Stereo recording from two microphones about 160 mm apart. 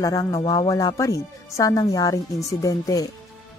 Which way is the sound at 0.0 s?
20° left (ahead or behind).